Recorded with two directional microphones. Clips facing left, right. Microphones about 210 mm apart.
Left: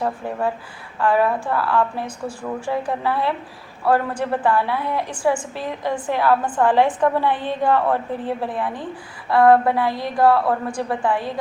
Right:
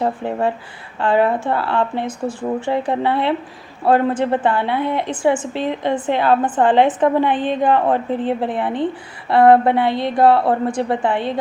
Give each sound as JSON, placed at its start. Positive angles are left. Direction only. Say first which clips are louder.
{"t": 0.0, "sound": "a woman's voice", "louder": "right 4 dB", "side_deg": -25}